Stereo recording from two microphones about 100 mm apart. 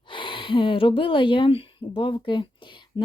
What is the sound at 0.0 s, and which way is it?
Speech, 55° left (ahead or behind).